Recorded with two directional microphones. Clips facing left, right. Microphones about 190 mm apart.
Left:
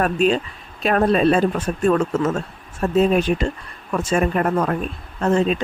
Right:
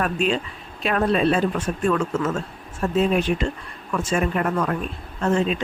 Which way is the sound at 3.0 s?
40° left (ahead or behind).